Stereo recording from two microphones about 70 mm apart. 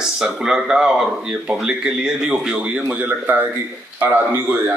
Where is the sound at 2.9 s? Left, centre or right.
Right.